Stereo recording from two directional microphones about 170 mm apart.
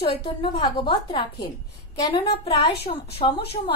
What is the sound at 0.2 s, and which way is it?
A woman's voice, 30° left (ahead or behind).